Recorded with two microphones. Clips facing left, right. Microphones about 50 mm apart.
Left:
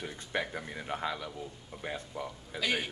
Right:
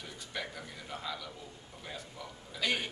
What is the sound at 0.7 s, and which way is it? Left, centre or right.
A man's voice, left.